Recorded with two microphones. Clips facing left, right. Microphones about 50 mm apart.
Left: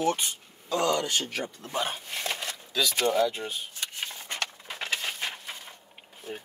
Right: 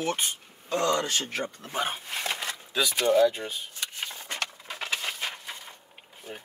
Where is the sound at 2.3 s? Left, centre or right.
Right.